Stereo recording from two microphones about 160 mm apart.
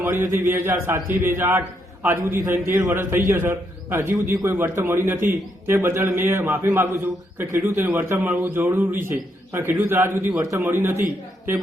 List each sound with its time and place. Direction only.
0.0 s a man's voice: 15° right (ahead or behind)